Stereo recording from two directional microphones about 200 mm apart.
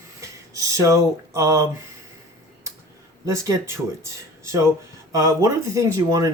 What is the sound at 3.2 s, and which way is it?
Speech, 15° right (ahead or behind).